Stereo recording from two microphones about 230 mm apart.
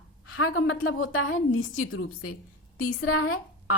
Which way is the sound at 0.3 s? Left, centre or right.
Left.